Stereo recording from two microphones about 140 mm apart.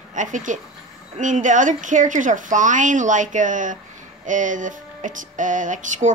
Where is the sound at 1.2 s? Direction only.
65° right (ahead or behind).